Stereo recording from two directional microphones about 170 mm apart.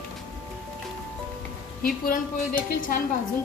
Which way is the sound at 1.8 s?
55° left (ahead or behind).